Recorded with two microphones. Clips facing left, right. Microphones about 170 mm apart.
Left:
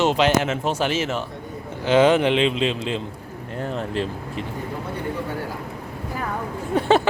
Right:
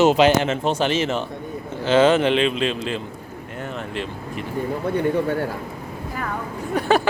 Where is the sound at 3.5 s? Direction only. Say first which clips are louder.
Left 4 dB; 35° left (ahead or behind).